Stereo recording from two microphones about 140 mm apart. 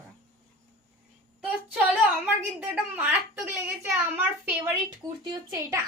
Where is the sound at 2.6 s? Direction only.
10° right (ahead or behind).